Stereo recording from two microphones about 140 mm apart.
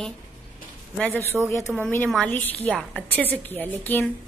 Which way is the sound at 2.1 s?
10° left (ahead or behind).